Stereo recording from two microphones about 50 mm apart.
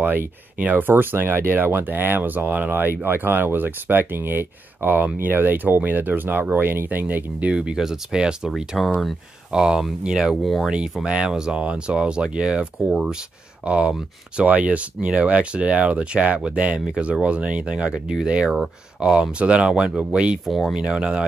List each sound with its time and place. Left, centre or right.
0.0 s speech: right
2.7 s speech: right; by 8.5 s centre
8.7 s speech: centre
9.5 s speech: centre
10.4 s speech: centre
11.1 s speech: centre
12.9 s speech: centre
13.7 s speech: right